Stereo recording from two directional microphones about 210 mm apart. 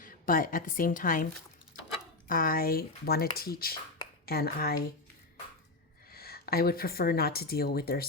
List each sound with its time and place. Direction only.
0.0 s a woman's voice: 40° left (ahead or behind)
6.1 s speech: 45° left (ahead or behind)